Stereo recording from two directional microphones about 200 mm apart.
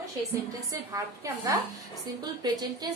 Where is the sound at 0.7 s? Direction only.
15° right (ahead or behind).